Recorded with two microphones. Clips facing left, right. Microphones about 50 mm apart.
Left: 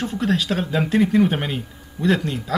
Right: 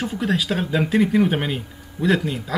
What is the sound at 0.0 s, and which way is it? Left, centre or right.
Speech, centre.